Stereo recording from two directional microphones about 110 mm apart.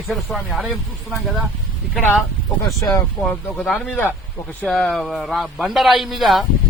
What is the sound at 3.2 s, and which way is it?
A man's voice, 5° left (ahead or behind).